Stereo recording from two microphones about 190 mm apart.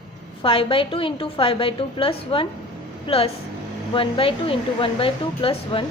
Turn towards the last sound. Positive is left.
turn(degrees=30)  # may be behind; listen again after turning